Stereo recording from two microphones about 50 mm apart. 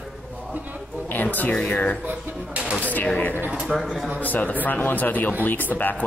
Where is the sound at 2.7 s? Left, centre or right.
Left.